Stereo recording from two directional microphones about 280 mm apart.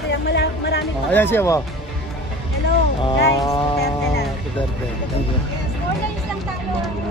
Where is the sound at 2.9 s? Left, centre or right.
Centre.